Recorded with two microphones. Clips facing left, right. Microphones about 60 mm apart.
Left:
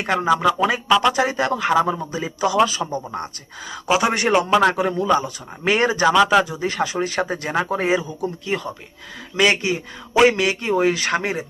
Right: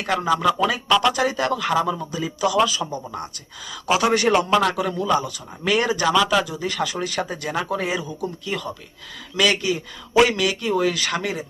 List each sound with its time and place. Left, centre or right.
0.0 s speech: left
0.9 s speech: centre
1.1 s speech: left
2.8 s a man's voice: centre; by 11.4 s left